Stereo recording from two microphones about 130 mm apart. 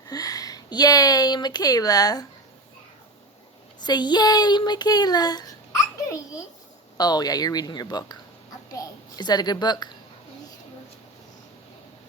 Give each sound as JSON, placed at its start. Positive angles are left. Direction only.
{"t": 0.1, "sound": "speech", "side_deg": 25}
{"t": 3.8, "sound": "a child's voice", "side_deg": 35}